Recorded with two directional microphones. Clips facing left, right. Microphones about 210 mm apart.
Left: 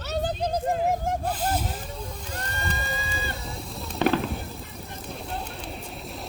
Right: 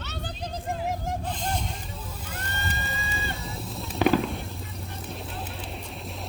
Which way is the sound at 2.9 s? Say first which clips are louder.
Left 2 dB; centre (ahead or behind).